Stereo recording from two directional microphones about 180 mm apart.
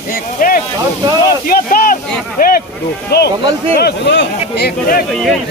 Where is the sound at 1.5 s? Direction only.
50° left (ahead or behind).